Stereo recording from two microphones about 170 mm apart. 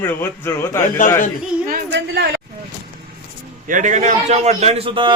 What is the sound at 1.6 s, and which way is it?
Speech, 75° right (ahead or behind).